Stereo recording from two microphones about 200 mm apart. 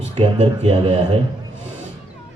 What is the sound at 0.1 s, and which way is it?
Speech, 30° right (ahead or behind).